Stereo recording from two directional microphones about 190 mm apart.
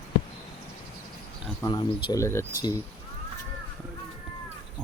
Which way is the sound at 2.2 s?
15° left (ahead or behind).